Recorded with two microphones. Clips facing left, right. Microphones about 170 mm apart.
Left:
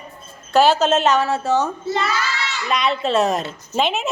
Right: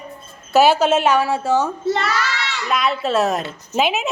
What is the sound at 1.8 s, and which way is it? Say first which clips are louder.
Speech: right 2 dB; 65° right (ahead or behind).